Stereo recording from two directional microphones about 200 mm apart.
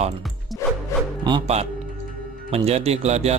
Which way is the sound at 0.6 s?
15° left (ahead or behind).